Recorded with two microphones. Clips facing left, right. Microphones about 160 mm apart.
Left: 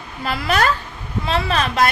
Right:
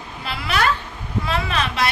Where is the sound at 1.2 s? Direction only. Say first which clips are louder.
Left 4 dB; 35° left (ahead or behind).